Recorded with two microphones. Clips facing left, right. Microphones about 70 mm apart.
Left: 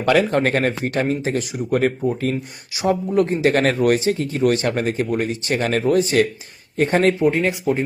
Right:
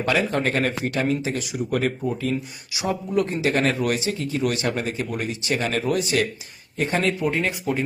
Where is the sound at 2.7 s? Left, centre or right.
Left.